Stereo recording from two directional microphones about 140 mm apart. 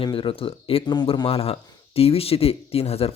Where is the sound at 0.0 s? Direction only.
40° left (ahead or behind).